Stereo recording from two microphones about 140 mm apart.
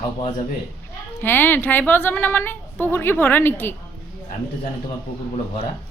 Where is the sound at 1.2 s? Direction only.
15° left (ahead or behind).